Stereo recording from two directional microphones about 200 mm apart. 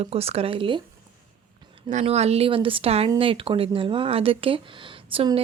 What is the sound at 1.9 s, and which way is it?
A woman's voice, 35° right (ahead or behind).